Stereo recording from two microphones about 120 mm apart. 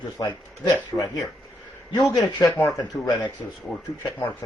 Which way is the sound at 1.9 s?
35° left (ahead or behind).